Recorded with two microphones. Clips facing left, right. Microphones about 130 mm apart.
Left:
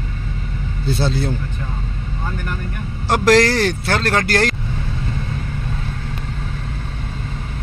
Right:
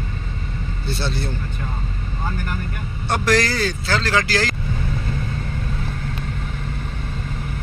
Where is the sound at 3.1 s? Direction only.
90° left; by 4.5 s 60° left (ahead or behind).